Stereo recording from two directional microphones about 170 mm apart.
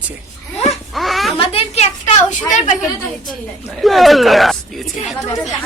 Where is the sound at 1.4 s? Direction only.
35° left (ahead or behind).